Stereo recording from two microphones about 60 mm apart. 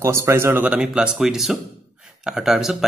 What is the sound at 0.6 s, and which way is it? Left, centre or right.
Speech, centre.